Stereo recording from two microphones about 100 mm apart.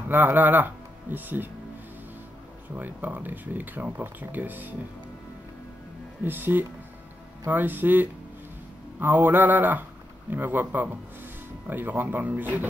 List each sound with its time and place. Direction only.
0.1 s speech: 20° right (ahead or behind)
2.7 s speech: 15° right (ahead or behind)
6.2 s speech: 20° right (ahead or behind)